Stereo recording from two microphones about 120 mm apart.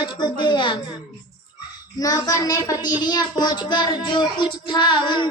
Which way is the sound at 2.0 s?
30° left (ahead or behind).